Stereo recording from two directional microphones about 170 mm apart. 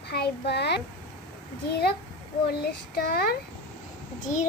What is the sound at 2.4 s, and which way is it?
Speech, 70° left (ahead or behind).